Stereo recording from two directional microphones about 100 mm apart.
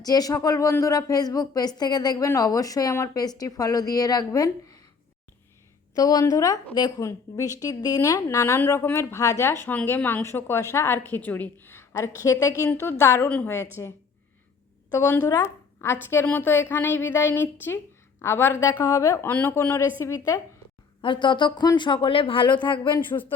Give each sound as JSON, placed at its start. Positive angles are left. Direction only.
{"t": 0.0, "sound": "speech", "side_deg": 40}
{"t": 6.0, "sound": "speech", "side_deg": 40}
{"t": 8.5, "sound": "a woman's voice", "side_deg": 25}
{"t": 12.7, "sound": "a woman's voice", "side_deg": 25}
{"t": 13.2, "sound": "a woman's voice", "side_deg": 15}
{"t": 13.8, "sound": "speech", "side_deg": 35}
{"t": 15.3, "sound": "a woman's voice", "side_deg": 30}
{"t": 21.0, "sound": "speech", "side_deg": 55}
{"t": 23.0, "sound": "a woman's voice", "side_deg": 20}